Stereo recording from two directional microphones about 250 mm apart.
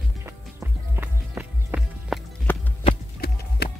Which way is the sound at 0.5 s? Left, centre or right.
Centre.